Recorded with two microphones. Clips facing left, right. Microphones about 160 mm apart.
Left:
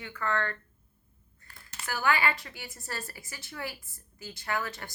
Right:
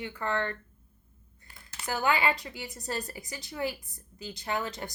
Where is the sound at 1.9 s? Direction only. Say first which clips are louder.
Right 1 dB; 20° right (ahead or behind).